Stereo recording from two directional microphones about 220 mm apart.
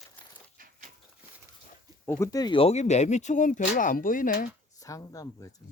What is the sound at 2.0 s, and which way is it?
Speech, 10° left (ahead or behind).